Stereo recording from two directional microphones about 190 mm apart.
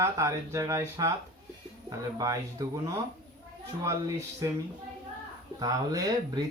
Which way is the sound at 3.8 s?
15° right (ahead or behind).